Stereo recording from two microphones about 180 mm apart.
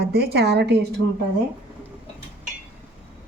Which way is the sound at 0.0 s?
60° right (ahead or behind).